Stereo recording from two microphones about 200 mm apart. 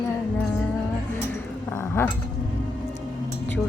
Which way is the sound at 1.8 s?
10° left (ahead or behind).